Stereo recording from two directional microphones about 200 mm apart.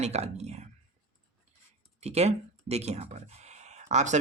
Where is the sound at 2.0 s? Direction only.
30° right (ahead or behind).